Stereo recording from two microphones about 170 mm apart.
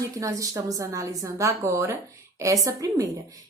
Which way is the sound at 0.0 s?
20° right (ahead or behind).